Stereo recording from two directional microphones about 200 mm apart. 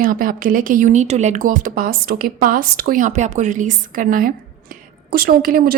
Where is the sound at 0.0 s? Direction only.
45° right (ahead or behind).